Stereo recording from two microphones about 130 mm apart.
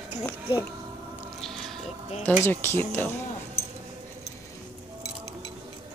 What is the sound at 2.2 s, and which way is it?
Speech, 15° left (ahead or behind).